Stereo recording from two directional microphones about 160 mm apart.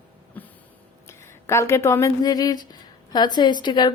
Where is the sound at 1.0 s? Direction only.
15° left (ahead or behind).